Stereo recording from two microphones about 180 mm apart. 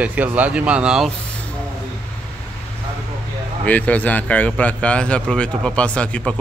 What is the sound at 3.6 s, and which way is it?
Speech, 10° left (ahead or behind).